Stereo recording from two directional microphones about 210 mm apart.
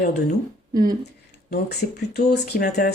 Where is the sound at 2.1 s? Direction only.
50° left (ahead or behind).